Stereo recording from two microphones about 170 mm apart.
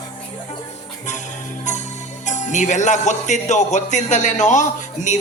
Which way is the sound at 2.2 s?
45° left (ahead or behind).